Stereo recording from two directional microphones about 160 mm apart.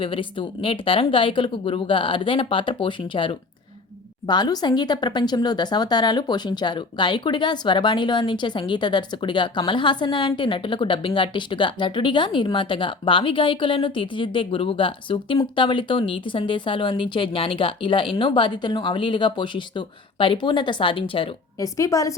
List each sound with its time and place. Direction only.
0.0 s speech: 35° left (ahead or behind)
21.6 s a woman's voice: 20° left (ahead or behind)